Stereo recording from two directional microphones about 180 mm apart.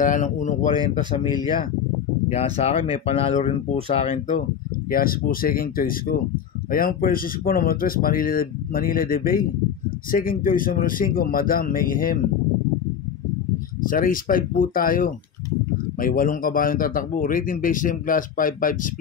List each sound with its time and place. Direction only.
0.0 s speech: 45° left (ahead or behind)
2.3 s speech: 35° left (ahead or behind)
4.9 s speech: 55° left (ahead or behind)
13.8 s speech: 50° left (ahead or behind)